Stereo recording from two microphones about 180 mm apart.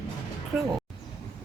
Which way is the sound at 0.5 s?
10° right (ahead or behind).